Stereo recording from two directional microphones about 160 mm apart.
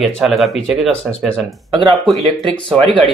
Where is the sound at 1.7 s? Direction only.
25° right (ahead or behind).